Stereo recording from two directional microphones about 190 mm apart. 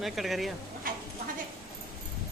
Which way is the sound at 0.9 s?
45° right (ahead or behind).